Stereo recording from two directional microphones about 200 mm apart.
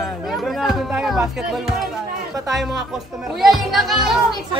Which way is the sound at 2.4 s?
Centre (ahead or behind).